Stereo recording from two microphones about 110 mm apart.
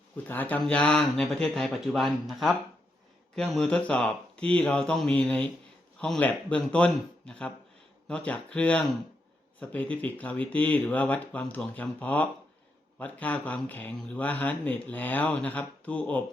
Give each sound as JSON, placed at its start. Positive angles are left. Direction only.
{"t": 0.3, "sound": "speech", "side_deg": 15}